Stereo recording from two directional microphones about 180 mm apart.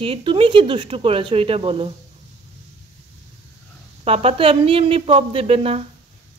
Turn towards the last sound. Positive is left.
turn(degrees=-35)  # may be behind; listen again after turning